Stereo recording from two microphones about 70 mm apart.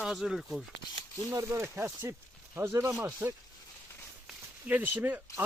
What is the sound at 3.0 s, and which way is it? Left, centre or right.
Speech, right.